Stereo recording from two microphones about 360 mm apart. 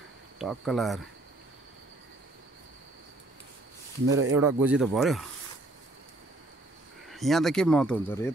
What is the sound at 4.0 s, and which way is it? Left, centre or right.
Speech, right.